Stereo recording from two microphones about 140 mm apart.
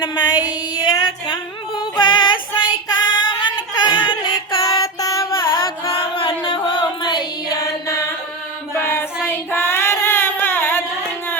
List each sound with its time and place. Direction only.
0.0 s female singing: 30° left (ahead or behind)
1.8 s music: 35° left (ahead or behind)
2.9 s female singing: 30° left (ahead or behind)
4.6 s child singing: 25° left (ahead or behind)
5.4 s chant: 40° left (ahead or behind)
6.4 s music: 35° left (ahead or behind)
8.7 s child singing: 15° left (ahead or behind)